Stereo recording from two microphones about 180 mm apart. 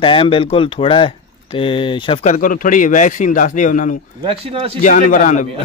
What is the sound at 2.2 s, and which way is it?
A man's voice, 45° left (ahead or behind).